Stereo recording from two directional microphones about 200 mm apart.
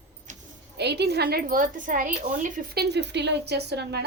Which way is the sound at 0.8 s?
55° right (ahead or behind).